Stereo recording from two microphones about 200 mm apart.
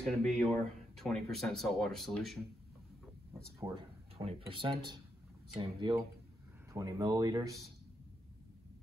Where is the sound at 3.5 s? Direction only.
15° right (ahead or behind).